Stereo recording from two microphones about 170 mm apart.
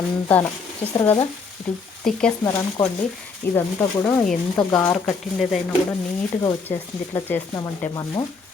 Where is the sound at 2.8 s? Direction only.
10° left (ahead or behind).